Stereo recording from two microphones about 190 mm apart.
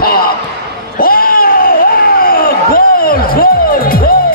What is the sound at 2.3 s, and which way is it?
Music, 50° left (ahead or behind).